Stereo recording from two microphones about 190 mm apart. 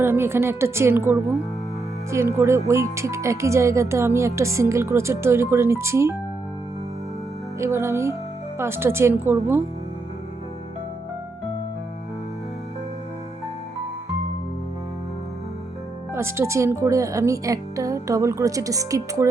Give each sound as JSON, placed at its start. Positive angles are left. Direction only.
{"t": 0.0, "sound": "speech", "side_deg": -10}
{"t": 7.6, "sound": "speech", "side_deg": -15}
{"t": 16.1, "sound": "speech", "side_deg": -15}